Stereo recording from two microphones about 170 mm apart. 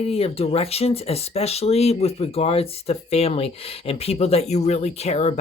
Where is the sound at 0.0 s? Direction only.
35° left (ahead or behind).